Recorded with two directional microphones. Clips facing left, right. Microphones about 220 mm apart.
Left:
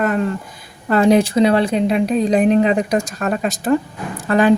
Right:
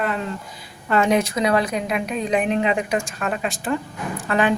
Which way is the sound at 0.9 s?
35° left (ahead or behind).